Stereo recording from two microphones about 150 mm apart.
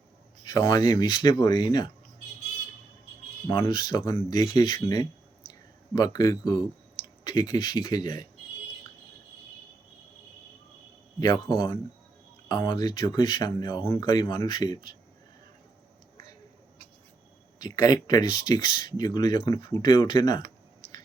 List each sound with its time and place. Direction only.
0.4 s speech: 30° left (ahead or behind)
3.4 s speech: 20° left (ahead or behind)
3.7 s speech: 30° left (ahead or behind)
11.2 s speech: 30° left (ahead or behind)
17.6 s speech: 25° left (ahead or behind)